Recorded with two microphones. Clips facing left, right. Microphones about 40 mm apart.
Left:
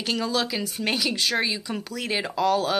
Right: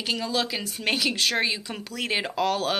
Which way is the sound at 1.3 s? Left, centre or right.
Centre.